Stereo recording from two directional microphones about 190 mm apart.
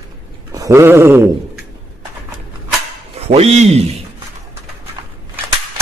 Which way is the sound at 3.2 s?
35° right (ahead or behind).